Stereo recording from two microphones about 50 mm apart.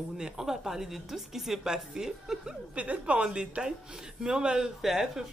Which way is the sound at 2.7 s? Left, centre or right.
Right.